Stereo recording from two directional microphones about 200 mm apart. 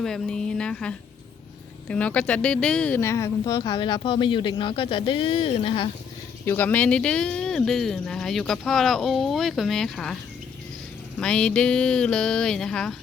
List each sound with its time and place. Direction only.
0.0 s speech: 5° left (ahead or behind); by 5.9 s 25° left (ahead or behind)
6.4 s speech: 10° left (ahead or behind)
11.2 s speech: 5° left (ahead or behind)